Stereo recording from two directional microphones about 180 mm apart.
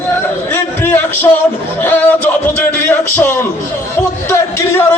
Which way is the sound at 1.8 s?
10° left (ahead or behind).